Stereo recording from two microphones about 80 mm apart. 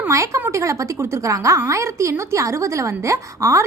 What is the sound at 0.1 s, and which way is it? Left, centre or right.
A woman's voice, right.